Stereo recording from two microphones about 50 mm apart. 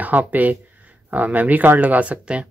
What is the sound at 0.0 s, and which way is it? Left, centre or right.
Speech, right.